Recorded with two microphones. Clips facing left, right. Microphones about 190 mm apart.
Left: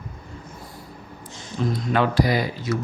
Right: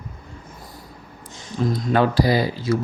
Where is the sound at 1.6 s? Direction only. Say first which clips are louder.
Right 3 dB; 40° right (ahead or behind).